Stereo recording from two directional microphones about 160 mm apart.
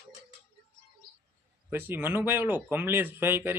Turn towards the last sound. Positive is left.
turn(degrees=-15)  # may be behind; listen again after turning